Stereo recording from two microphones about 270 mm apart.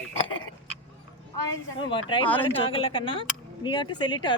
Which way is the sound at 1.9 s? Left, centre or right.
Centre.